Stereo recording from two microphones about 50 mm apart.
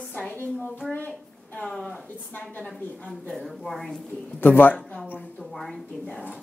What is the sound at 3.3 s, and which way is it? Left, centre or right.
Speech, centre.